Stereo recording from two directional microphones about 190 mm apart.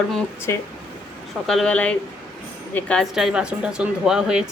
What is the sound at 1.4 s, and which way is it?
Speech, centre (ahead or behind).